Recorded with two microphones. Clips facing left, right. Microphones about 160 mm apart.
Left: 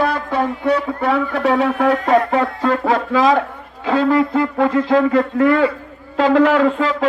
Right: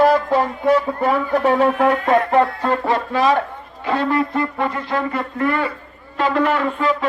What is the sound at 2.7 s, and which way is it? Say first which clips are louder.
Speech: left 3 dB; 90° left.